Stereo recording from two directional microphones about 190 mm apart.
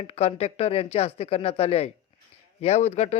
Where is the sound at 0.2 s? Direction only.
35° left (ahead or behind).